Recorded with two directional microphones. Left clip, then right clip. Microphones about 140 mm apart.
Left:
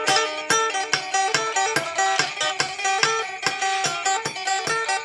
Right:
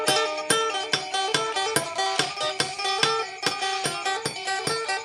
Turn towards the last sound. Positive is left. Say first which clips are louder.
# left 2 dB
turn(degrees=-35)  # may be behind; listen again after turning